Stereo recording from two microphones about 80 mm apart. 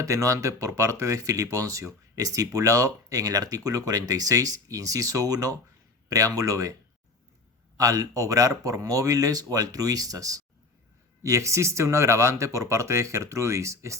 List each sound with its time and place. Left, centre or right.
0.0 s speech: right
7.8 s speech: right